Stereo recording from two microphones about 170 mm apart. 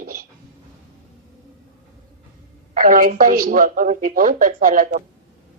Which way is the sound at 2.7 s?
50° right (ahead or behind).